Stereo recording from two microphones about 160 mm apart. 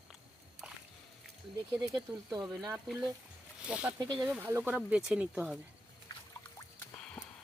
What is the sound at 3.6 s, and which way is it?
Speech, 5° right (ahead or behind).